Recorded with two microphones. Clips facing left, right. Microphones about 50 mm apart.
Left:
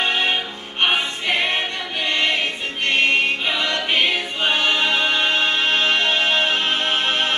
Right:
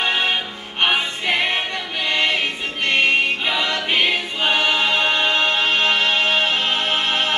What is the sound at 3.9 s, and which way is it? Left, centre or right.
Choir, centre.